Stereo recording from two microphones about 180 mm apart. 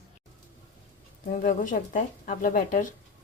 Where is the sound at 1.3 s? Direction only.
45° left (ahead or behind).